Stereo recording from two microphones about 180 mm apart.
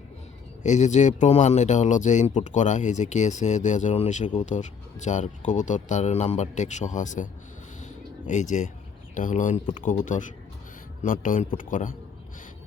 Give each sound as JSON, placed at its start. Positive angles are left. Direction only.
{"t": 0.6, "sound": "speech", "side_deg": 40}
{"t": 7.8, "sound": "a sound", "side_deg": 45}
{"t": 9.1, "sound": "speech", "side_deg": 45}